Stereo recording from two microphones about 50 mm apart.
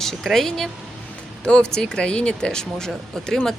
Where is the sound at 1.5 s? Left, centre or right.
Centre.